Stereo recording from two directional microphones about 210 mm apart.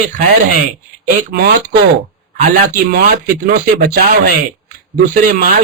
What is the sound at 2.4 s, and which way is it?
Speech, 40° right (ahead or behind).